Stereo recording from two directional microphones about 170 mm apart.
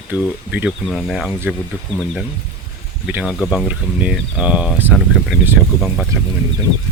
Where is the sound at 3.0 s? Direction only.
5° right (ahead or behind).